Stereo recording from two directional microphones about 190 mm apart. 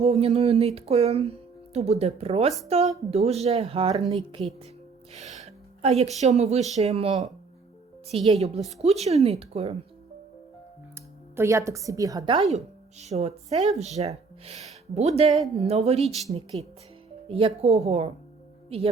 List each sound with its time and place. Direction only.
0.0 s a woman's voice: 35° right (ahead or behind)
11.3 s a woman's voice: 15° right (ahead or behind); by 15.3 s 35° right (ahead or behind)
15.3 s speech: centre (ahead or behind)
15.5 s a woman's voice: 35° right (ahead or behind)